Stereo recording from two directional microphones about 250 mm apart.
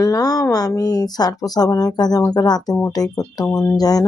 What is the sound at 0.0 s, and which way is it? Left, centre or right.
Speech, centre.